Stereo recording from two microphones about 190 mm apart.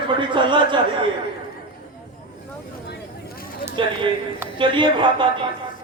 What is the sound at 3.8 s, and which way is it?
A man's voice, 25° right (ahead or behind).